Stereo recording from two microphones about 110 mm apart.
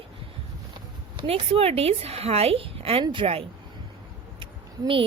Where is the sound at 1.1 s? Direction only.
60° right (ahead or behind).